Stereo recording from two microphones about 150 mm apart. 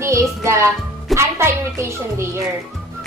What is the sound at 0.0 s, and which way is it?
Music, 20° right (ahead or behind).